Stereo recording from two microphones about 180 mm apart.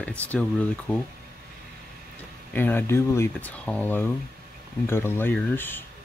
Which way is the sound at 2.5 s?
10° left (ahead or behind).